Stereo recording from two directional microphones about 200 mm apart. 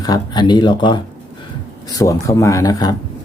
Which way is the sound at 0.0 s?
20° left (ahead or behind).